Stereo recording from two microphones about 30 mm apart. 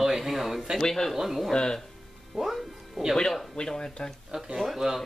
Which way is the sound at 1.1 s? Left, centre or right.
Centre.